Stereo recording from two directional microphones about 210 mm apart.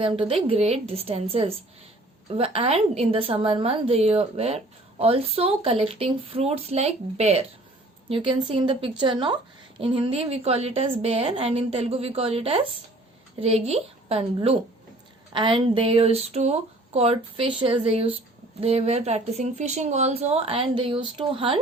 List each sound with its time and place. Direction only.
0.0 s a woman's voice: 25° right (ahead or behind)